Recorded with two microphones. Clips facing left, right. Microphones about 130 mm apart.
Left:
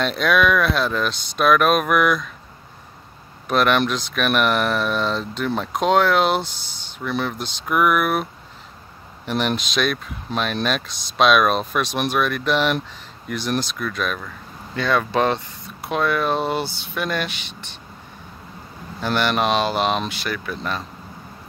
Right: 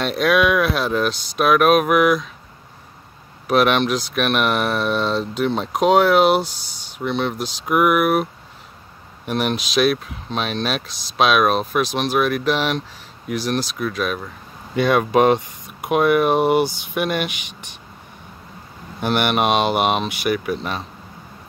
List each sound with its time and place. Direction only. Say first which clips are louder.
0.0 s speech: right 1 dB; 5° right (ahead or behind)
3.4 s speech: right 2 dB; 5° right (ahead or behind)
7.0 s speech: right 3 dB; 20° right (ahead or behind)
7.3 s speech: right 2 dB; 5° right (ahead or behind)
9.5 s speech: right 4 dB; 5° right (ahead or behind)
18.9 s speech: right 2 dB; 15° right (ahead or behind)